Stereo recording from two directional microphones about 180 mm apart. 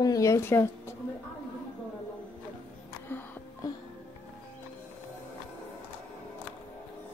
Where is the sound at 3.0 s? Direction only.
10° left (ahead or behind).